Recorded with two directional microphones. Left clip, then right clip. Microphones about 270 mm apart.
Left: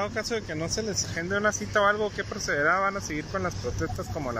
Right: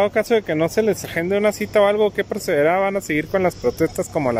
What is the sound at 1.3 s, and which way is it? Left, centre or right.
Speech, centre.